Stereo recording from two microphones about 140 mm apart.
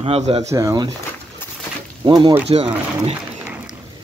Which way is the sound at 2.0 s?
30° right (ahead or behind).